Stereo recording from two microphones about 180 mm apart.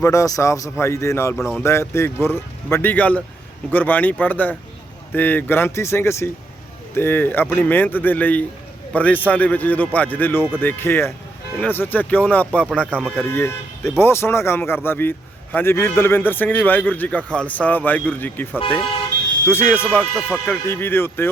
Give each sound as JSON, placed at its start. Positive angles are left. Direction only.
{"t": 0.0, "sound": "a man's voice", "side_deg": 15}
{"t": 1.4, "sound": "speech", "side_deg": 0}
{"t": 1.6, "sound": "a man's voice", "side_deg": 15}
{"t": 13.2, "sound": "a man's voice", "side_deg": 15}
{"t": 19.5, "sound": "a man's voice", "side_deg": 10}